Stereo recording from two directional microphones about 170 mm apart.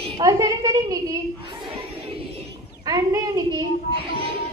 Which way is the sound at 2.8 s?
20° right (ahead or behind).